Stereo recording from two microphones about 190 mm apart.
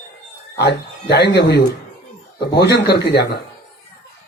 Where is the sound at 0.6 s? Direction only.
60° left (ahead or behind).